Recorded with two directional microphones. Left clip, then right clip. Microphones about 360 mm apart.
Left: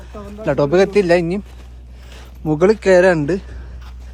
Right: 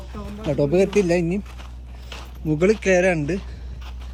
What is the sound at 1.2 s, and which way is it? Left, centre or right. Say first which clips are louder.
Speech: left 5 dB; left.